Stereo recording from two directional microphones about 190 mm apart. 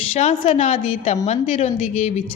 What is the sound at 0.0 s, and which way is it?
Speech, 35° left (ahead or behind).